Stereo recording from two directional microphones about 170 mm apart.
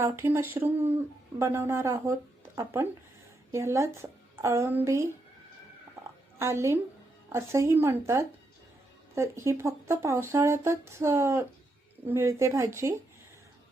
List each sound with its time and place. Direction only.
0.0 s speech: 15° right (ahead or behind)
3.5 s speech: 15° right (ahead or behind)
6.4 s speech: 15° right (ahead or behind)